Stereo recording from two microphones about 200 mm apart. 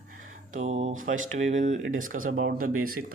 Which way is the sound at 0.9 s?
40° right (ahead or behind).